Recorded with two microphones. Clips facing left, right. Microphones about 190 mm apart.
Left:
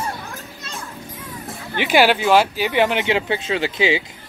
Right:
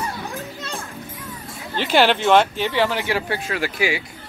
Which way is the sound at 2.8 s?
20° left (ahead or behind).